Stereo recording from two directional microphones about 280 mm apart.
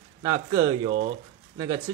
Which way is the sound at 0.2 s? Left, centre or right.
Centre.